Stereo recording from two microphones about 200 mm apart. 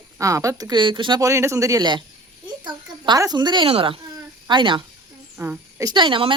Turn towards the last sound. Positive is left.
turn(degrees=-25)  # may be behind; listen again after turning